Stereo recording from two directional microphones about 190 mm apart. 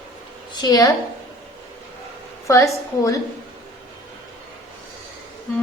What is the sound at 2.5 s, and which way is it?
Speech, 15° left (ahead or behind).